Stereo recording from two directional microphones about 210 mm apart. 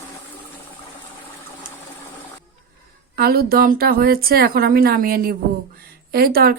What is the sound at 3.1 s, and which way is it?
Speech, 45° right (ahead or behind).